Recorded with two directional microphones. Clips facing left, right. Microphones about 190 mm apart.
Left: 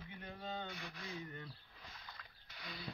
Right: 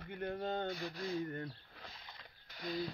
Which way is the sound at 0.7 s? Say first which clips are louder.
Right 9 dB; 40° right (ahead or behind).